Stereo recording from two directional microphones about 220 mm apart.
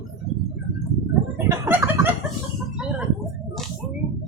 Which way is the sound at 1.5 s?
10° right (ahead or behind).